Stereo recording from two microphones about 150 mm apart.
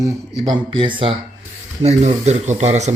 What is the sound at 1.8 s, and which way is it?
Speech, 45° right (ahead or behind).